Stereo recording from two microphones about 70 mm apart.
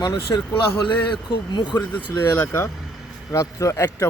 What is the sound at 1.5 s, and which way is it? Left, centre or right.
Speech, left.